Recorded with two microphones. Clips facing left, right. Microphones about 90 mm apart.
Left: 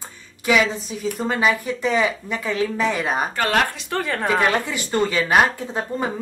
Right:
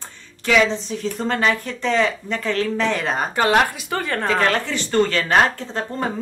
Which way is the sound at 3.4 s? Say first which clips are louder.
Right 4 dB; 15° right (ahead or behind).